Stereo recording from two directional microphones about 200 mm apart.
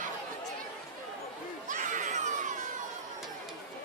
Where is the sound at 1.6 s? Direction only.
40° right (ahead or behind).